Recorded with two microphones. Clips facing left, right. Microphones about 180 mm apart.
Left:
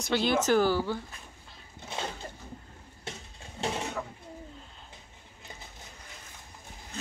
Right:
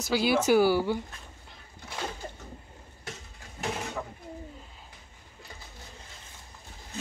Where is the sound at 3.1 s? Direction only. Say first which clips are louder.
Left 1 dB; 25° left (ahead or behind).